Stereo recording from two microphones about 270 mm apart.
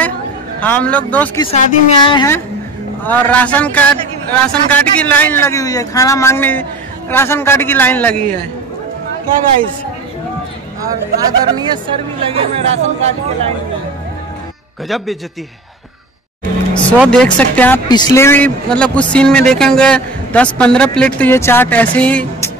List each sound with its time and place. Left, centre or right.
0.6 s speech: centre
1.4 s speech: centre
10.8 s speech: centre
16.7 s speech: centre